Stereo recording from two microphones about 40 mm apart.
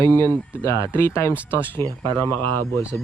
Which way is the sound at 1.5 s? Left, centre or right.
Left.